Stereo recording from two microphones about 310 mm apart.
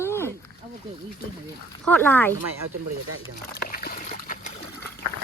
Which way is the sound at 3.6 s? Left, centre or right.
Left.